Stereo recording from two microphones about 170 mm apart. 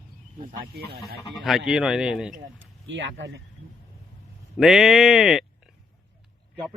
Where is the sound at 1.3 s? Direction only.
Centre (ahead or behind).